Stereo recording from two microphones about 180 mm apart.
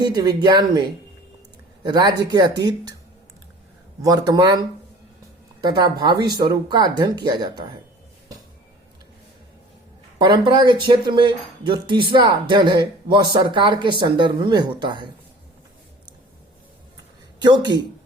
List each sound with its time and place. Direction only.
0.0 s speech: 20° right (ahead or behind)
4.0 s speech: 20° right (ahead or behind)
10.2 s speech: 25° right (ahead or behind)
17.4 s speech: 25° right (ahead or behind)